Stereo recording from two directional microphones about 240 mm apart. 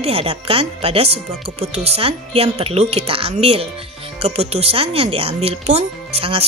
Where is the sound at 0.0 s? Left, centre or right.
Right.